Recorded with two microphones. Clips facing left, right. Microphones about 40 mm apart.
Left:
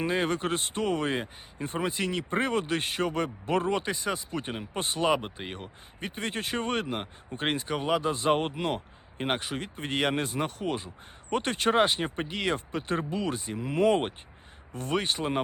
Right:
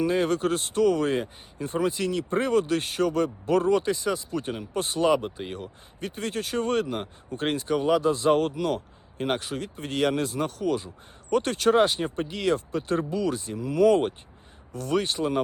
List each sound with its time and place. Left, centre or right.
0.0 s speech: left